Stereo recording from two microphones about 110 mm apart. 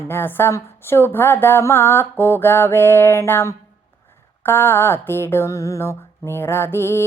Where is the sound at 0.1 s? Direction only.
20° left (ahead or behind).